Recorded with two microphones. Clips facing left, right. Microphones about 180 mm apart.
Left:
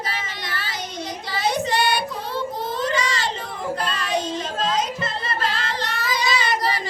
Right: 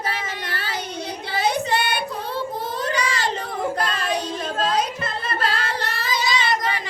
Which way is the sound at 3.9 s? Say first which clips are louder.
Even; 55° right (ahead or behind).